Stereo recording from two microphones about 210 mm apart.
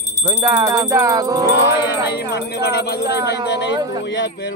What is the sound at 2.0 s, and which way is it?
Speech, 50° left (ahead or behind).